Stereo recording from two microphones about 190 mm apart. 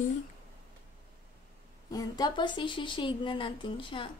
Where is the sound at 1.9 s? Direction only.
20° left (ahead or behind).